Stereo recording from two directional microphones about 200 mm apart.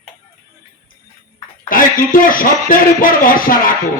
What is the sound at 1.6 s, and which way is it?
Speech, 45° left (ahead or behind).